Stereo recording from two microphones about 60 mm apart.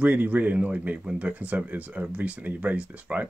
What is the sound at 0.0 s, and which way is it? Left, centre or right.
Speech, right.